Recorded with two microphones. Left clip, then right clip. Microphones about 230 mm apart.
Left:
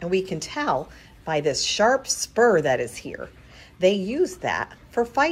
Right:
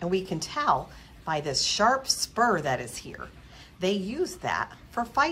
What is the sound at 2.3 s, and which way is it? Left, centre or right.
Speech, right.